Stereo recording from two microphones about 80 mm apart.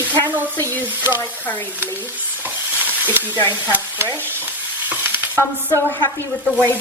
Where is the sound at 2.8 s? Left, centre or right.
Right.